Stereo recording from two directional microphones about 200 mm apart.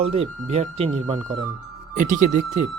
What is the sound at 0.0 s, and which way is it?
Speech, 30° right (ahead or behind).